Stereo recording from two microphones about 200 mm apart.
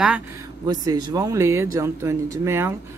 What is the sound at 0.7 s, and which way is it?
A man's voice, 20° right (ahead or behind).